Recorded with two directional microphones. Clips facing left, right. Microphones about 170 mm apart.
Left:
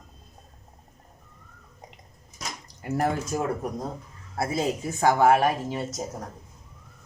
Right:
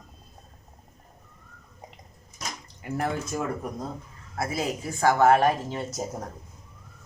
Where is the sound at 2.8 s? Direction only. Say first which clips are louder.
Left 3 dB; 40° left (ahead or behind).